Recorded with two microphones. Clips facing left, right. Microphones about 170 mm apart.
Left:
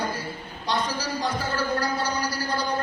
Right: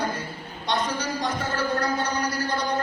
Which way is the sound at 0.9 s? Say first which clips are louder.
Even; 30° left (ahead or behind).